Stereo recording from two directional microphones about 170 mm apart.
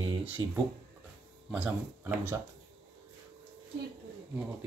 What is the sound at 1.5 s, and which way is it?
Speech, 5° right (ahead or behind).